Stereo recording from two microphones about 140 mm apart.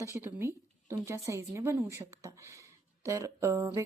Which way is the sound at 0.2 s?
15° right (ahead or behind).